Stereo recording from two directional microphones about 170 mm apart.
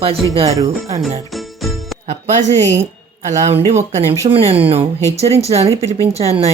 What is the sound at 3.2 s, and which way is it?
Speech, 40° right (ahead or behind).